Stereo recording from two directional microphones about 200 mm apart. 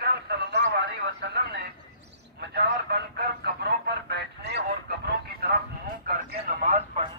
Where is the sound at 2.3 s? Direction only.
55° right (ahead or behind).